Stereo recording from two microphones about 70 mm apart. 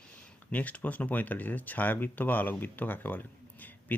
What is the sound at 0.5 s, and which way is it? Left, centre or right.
Speech, left.